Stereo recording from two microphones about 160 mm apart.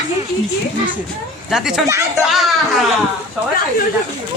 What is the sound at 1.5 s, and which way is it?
Speech, centre (ahead or behind).